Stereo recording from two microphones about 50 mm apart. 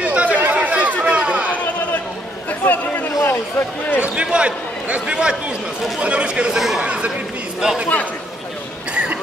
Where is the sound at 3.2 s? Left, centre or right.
Left.